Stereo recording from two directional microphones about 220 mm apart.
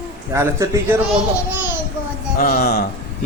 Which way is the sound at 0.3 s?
15° right (ahead or behind).